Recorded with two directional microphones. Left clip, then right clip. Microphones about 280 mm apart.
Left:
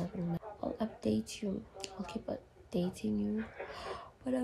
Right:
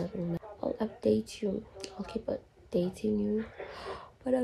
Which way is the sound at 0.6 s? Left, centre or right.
Centre.